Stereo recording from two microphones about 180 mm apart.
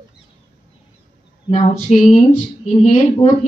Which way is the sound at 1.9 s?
40° left (ahead or behind).